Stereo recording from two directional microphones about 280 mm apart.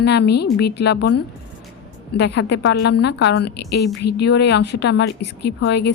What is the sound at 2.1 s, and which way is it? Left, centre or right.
A woman's voice, left.